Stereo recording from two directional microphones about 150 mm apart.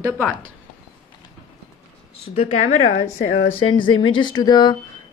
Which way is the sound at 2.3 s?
50° left (ahead or behind).